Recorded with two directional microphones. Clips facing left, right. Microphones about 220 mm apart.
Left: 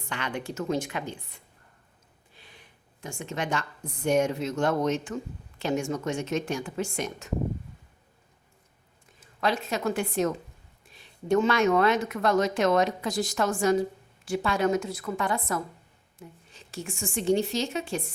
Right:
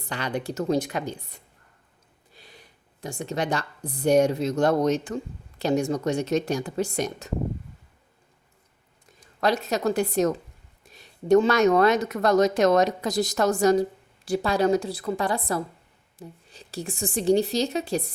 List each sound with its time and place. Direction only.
0.0 s speech: 35° right (ahead or behind)
9.4 s speech: 40° right (ahead or behind)